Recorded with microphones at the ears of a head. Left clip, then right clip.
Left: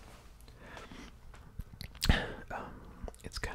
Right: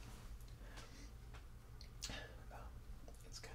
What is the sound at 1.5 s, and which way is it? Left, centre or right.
Whispering, left.